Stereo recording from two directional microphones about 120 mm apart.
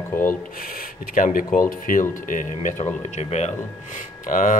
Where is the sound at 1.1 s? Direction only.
90° left; by 3.4 s 65° left (ahead or behind).